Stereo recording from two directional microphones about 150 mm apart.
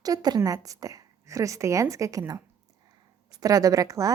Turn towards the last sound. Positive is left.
turn(degrees=-25)  # may be behind; listen again after turning